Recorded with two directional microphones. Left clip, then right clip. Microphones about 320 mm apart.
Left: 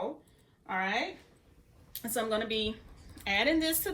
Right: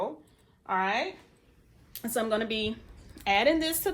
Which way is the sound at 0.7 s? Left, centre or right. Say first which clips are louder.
Right 4 dB; centre.